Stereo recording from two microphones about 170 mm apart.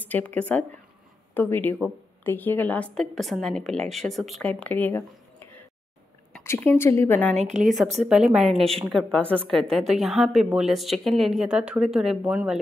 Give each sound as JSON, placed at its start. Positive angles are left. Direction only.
{"t": 0.0, "sound": "a woman's voice", "side_deg": 10}
{"t": 7.3, "sound": "a woman's voice", "side_deg": -45}
{"t": 8.0, "sound": "a woman's voice", "side_deg": -5}